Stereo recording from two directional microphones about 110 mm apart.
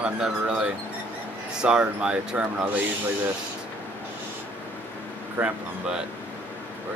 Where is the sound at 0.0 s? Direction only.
10° right (ahead or behind).